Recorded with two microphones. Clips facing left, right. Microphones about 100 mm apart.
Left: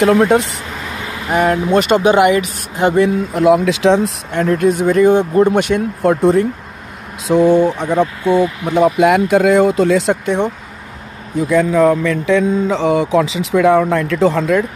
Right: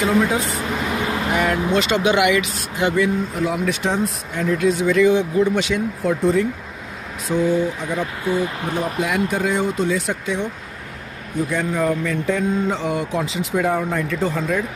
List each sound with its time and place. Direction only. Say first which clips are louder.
0.0 s speech: left 7 dB; 65° left (ahead or behind)
0.6 s a sound: right 4 dB; 15° right (ahead or behind)
1.3 s speech: left 8 dB; 45° left (ahead or behind)
3.0 s speech: left 6 dB; 75° left (ahead or behind); by 6.4 s 60° left (ahead or behind)
7.2 s speech: left 8 dB; 85° left; by 10.5 s 60° left (ahead or behind)
11.5 s speech: left 10 dB; 90° left